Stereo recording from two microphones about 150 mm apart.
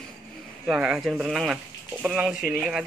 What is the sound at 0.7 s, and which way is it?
Speech, 5° right (ahead or behind).